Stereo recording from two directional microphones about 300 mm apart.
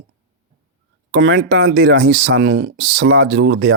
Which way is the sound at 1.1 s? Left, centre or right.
Right.